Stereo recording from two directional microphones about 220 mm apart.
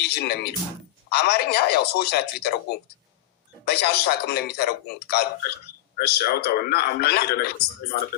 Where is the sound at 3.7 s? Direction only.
45° left (ahead or behind).